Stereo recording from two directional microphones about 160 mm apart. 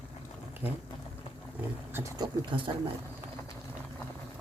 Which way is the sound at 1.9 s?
20° right (ahead or behind).